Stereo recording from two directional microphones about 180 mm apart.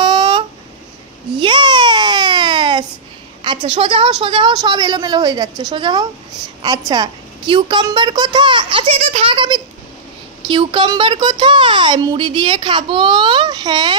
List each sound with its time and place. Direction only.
0.0 s a sound: 25° right (ahead or behind)
1.4 s baby cry: 25° right (ahead or behind)
3.4 s speech: 25° right (ahead or behind)